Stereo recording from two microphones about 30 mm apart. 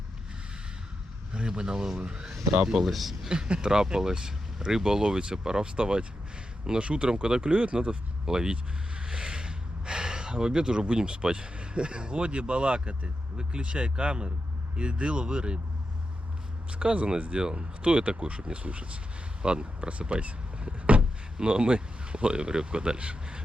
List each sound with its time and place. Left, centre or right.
1.5 s speech: right
2.9 s speech: centre
3.2 s speech: right
5.7 s speech: right
8.3 s speech: right
16.8 s speech: right
19.9 s door: right
21.3 s speech: right